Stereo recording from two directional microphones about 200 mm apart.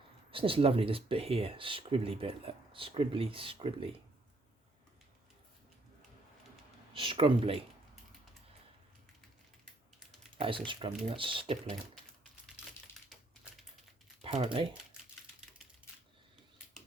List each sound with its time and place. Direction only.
0.3 s speech: 25° right (ahead or behind)
6.9 s speech: 25° right (ahead or behind)
10.3 s speech: 25° right (ahead or behind)
13.1 s typing: centre (ahead or behind)
14.2 s speech: 30° right (ahead or behind)